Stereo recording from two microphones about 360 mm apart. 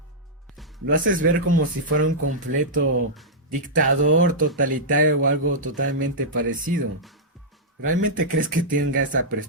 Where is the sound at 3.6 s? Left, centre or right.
Right.